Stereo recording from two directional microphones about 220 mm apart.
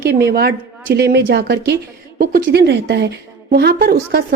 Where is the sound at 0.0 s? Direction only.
45° right (ahead or behind).